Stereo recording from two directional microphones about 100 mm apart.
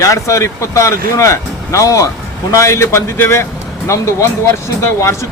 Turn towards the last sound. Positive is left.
turn(degrees=30)  # may be behind; listen again after turning